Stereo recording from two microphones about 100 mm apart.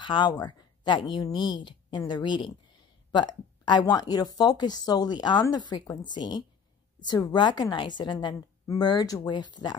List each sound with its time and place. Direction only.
0.0 s speech: 50° left (ahead or behind)